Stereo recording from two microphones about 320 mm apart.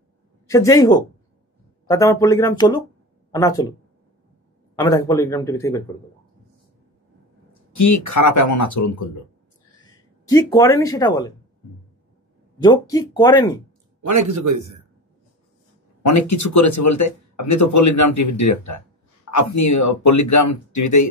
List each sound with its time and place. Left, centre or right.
0.5 s speech: centre
4.7 s speech: centre
7.7 s speech: left
10.2 s speech: centre
12.6 s speech: centre
14.0 s speech: right
16.0 s speech: left